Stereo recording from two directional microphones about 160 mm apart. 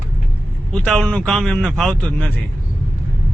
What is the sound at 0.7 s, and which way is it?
Speech, 5° left (ahead or behind).